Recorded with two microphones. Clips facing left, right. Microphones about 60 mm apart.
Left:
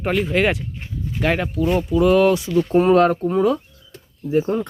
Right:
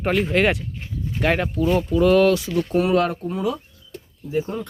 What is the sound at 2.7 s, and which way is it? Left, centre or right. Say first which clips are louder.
Speech: left 5 dB; left.